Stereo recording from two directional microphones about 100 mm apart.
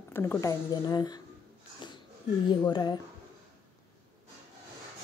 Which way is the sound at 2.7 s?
50° left (ahead or behind).